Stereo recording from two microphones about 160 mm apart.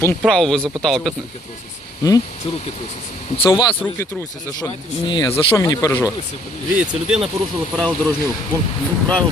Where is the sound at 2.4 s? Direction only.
35° left (ahead or behind).